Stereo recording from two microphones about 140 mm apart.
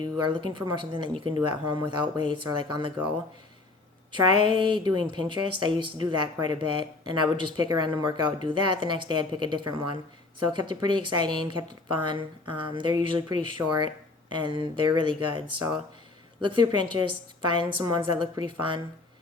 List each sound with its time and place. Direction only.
0.0 s speech: 35° right (ahead or behind)
4.1 s speech: 35° right (ahead or behind)